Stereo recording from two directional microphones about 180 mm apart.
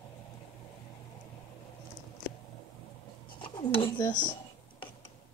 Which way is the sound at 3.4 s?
30° left (ahead or behind).